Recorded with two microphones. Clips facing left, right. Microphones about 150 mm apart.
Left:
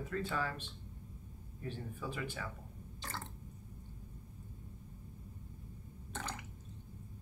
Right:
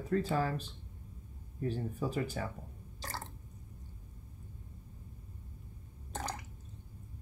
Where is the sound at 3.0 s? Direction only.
40° right (ahead or behind).